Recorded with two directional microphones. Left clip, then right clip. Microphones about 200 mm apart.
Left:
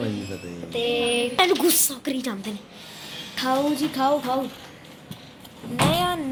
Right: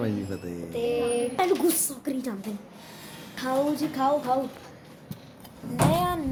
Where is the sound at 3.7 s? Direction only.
35° left (ahead or behind).